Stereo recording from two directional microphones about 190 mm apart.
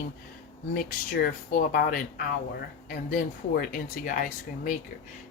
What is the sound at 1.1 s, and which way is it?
Speech, 55° left (ahead or behind).